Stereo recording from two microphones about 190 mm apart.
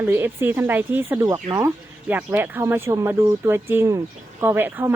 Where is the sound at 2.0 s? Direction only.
10° right (ahead or behind).